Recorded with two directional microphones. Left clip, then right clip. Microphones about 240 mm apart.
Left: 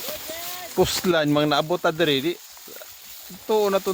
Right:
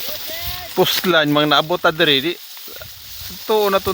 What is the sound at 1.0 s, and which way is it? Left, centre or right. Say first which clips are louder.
Speech: right 5 dB; centre.